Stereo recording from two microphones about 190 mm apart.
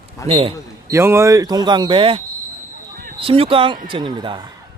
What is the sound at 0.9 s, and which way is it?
Speech, 15° right (ahead or behind).